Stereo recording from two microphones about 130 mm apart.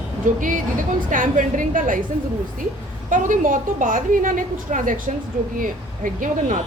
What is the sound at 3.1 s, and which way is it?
A woman's voice, 85° right.